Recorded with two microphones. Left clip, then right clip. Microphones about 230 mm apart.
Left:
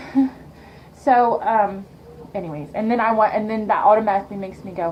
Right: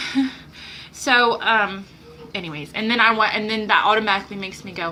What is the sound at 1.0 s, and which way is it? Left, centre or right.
A woman's voice, centre.